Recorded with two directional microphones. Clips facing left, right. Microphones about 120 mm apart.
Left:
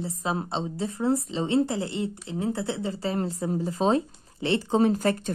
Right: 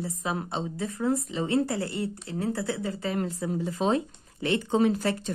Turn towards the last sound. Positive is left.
turn(degrees=45)  # may be behind; listen again after turning